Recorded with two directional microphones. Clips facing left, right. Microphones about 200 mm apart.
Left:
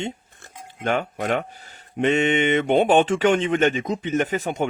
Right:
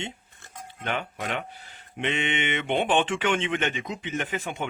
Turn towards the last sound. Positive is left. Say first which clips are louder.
# left 8 dB
turn(degrees=40)  # may be behind; listen again after turning